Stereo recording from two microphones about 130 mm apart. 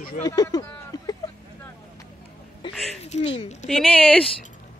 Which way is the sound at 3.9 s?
10° left (ahead or behind).